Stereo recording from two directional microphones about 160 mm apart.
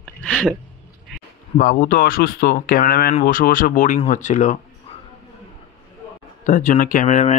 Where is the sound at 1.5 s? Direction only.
60° left (ahead or behind).